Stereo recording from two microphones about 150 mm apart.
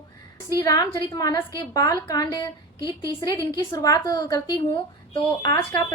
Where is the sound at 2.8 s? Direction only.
20° right (ahead or behind).